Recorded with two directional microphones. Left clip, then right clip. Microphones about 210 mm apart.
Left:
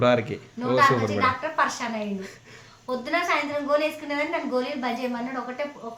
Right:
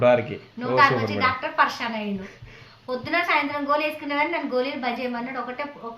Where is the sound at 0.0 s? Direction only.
15° left (ahead or behind).